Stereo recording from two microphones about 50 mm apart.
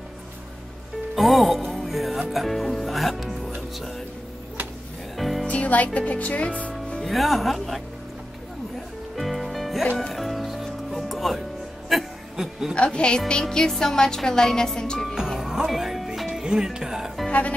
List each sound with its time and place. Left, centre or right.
1.1 s speech: centre
5.1 s music: centre
5.5 s speech: left
5.9 s music: left
7.1 s speech: centre
9.1 s music: centre
12.7 s music: left
13.3 s speech: centre
15.1 s music: centre
16.4 s speech: centre
17.3 s speech: left